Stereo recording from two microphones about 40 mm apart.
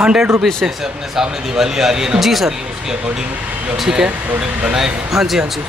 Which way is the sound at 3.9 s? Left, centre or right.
Right.